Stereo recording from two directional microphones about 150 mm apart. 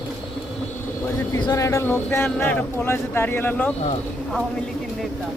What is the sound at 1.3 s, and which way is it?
Speech, 25° left (ahead or behind).